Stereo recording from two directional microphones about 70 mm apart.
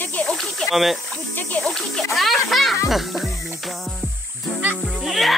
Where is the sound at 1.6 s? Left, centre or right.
Centre.